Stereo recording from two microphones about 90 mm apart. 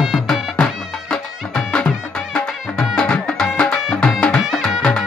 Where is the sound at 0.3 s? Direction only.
10° left (ahead or behind).